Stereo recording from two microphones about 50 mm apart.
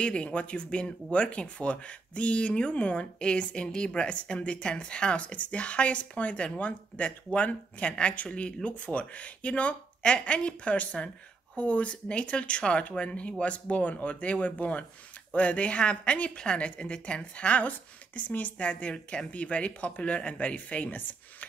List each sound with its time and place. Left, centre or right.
0.0 s a woman's voice: left